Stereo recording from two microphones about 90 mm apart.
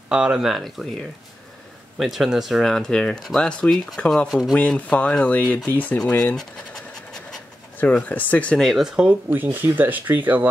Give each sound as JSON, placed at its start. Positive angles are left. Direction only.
{"t": 0.1, "sound": "speech", "side_deg": -10}
{"t": 2.0, "sound": "speech", "side_deg": -5}
{"t": 4.6, "sound": "speech", "side_deg": 15}
{"t": 7.8, "sound": "speech", "side_deg": 20}
{"t": 8.6, "sound": "speech", "side_deg": -5}
{"t": 9.3, "sound": "speech", "side_deg": -20}